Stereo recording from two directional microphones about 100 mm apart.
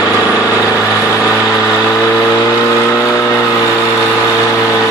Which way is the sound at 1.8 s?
30° left (ahead or behind).